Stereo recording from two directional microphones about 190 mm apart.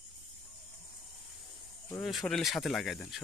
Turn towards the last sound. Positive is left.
turn(degrees=0)  # may be behind; listen again after turning